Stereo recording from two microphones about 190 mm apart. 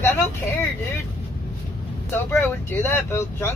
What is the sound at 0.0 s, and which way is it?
Vehicle, 10° left (ahead or behind).